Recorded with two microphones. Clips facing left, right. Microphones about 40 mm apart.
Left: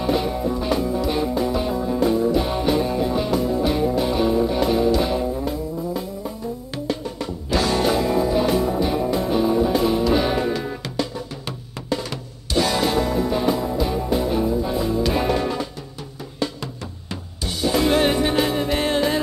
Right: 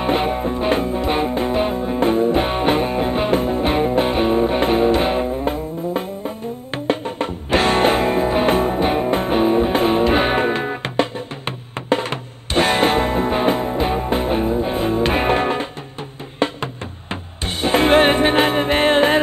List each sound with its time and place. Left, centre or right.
0.0 s music: right